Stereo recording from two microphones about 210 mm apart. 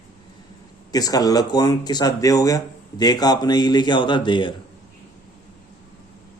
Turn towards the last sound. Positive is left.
turn(degrees=20)  # may be behind; listen again after turning